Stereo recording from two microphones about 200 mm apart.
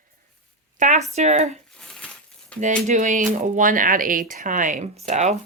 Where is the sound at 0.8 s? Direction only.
35° right (ahead or behind).